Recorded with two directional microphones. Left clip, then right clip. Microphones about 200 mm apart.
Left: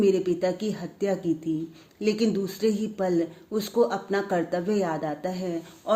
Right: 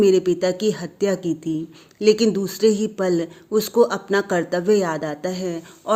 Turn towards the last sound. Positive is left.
turn(degrees=-30)  # may be behind; listen again after turning